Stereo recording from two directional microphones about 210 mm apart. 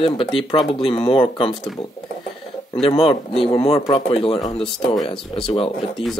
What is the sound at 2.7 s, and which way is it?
Speech, 25° left (ahead or behind).